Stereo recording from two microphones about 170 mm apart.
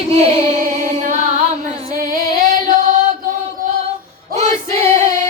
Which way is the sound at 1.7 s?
55° right (ahead or behind).